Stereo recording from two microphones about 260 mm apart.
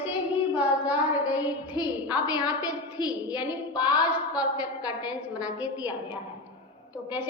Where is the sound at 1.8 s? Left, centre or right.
Centre.